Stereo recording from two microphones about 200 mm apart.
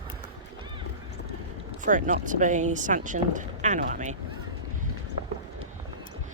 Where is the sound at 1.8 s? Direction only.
40° right (ahead or behind).